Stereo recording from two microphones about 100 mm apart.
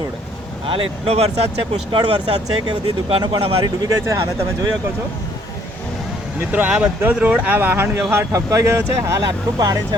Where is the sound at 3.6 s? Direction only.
40° right (ahead or behind).